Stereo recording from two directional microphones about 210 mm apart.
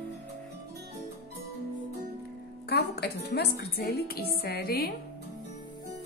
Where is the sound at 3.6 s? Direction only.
50° left (ahead or behind).